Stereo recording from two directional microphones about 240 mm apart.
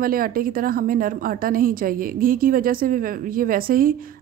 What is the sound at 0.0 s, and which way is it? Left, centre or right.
A woman's voice, right.